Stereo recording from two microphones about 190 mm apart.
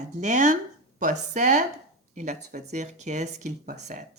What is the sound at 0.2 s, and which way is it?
Speech, 40° right (ahead or behind).